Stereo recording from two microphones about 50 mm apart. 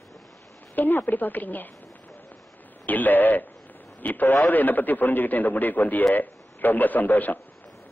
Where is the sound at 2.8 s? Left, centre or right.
Left.